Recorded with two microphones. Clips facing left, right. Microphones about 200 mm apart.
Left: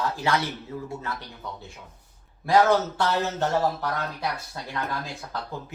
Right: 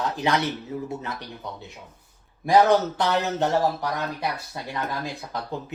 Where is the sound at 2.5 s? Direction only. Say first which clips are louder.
Right 2 dB; 15° right (ahead or behind).